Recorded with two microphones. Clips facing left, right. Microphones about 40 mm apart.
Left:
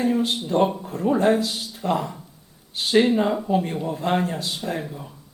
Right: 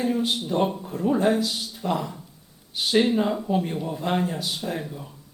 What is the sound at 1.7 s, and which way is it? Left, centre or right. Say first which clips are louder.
Speech: left 3 dB; centre.